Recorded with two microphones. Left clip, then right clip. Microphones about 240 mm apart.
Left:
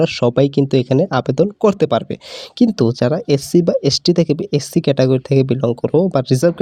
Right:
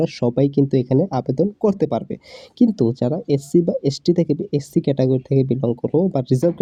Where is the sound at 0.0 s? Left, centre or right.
Left.